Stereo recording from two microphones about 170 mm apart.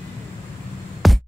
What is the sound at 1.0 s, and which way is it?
Music, centre (ahead or behind).